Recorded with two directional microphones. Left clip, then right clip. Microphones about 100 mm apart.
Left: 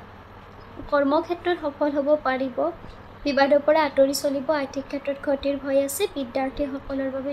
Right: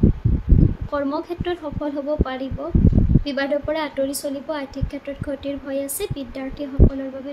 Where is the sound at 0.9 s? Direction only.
35° right (ahead or behind).